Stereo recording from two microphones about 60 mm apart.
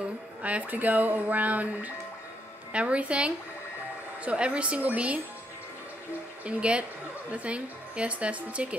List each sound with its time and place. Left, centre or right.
0.4 s a woman's voice: right
6.4 s a woman's voice: right